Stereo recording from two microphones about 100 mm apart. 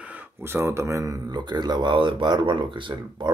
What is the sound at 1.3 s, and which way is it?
Speech, 45° right (ahead or behind).